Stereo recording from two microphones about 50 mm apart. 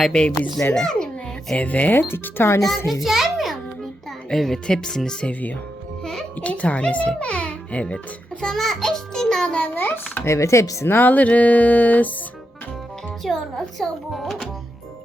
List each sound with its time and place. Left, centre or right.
0.0 s a child's voice: centre
0.7 s babbling: centre
1.6 s speech: left
2.0 s speech: left
2.6 s a child's voice: centre
4.3 s a child's voice: centre
5.3 s a child's voice: left
8.4 s a child's voice: centre
9.6 s speech: left
10.2 s speech: left
10.8 s speech: left
13.2 s speech: centre